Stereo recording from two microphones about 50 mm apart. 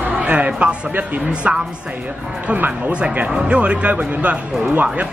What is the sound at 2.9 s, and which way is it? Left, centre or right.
Speech, right.